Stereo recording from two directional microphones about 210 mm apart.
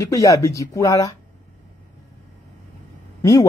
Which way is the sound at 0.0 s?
15° left (ahead or behind).